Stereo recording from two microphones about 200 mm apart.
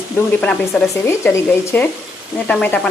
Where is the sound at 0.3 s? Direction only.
5° left (ahead or behind).